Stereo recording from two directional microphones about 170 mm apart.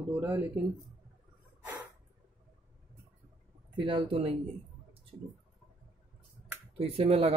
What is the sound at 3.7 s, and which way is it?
Speech, 30° right (ahead or behind).